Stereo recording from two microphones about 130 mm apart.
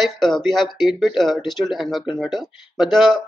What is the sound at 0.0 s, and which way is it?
Speech, centre (ahead or behind).